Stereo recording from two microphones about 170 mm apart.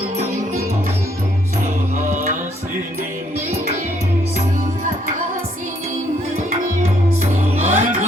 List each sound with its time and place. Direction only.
1.6 s music: 50° right (ahead or behind)
7.2 s music: 45° right (ahead or behind)